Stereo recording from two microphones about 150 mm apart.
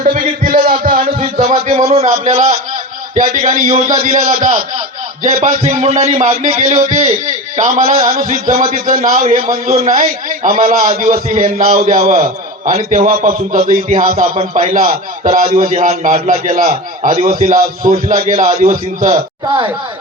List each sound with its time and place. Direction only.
0.0 s a man's voice: 65° right (ahead or behind)
1.4 s a man's voice: 50° right (ahead or behind)
3.2 s a man's voice: 60° right (ahead or behind)
9.2 s a man's voice: 55° right (ahead or behind); by 11.9 s 75° right (ahead or behind)
12.0 s a man's voice: 65° right (ahead or behind)
14.0 s a man's voice: 65° right (ahead or behind)
15.9 s a man's voice: 50° right (ahead or behind)